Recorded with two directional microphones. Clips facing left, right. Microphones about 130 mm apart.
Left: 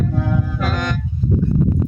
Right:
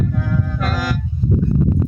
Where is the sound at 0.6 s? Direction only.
Centre (ahead or behind).